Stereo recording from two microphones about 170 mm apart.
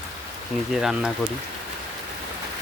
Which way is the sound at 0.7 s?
Centre (ahead or behind).